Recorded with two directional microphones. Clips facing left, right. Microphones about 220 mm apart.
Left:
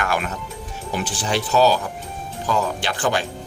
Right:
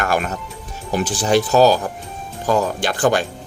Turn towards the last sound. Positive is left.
turn(degrees=-45)  # may be behind; listen again after turning